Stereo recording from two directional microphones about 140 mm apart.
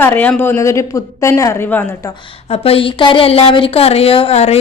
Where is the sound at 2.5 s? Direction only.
45° left (ahead or behind).